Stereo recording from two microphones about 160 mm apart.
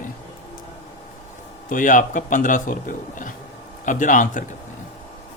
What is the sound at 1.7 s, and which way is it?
Speech, 55° left (ahead or behind).